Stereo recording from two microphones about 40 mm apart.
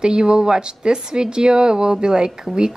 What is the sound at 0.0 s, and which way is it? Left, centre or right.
Speech, centre.